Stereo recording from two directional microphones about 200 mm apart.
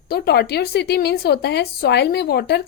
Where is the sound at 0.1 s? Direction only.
55° left (ahead or behind).